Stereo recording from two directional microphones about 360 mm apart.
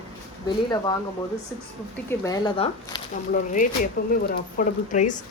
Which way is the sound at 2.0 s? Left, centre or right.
Centre.